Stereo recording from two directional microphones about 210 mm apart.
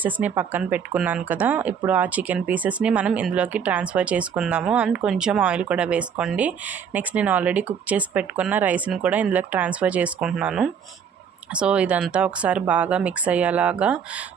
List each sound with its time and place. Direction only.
0.0 s speech: 5° right (ahead or behind)